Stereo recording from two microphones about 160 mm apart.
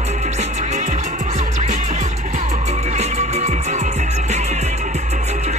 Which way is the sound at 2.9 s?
45° right (ahead or behind).